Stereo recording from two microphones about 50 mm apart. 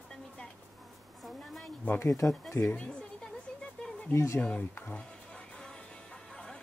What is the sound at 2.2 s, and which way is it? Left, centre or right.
Speech, left.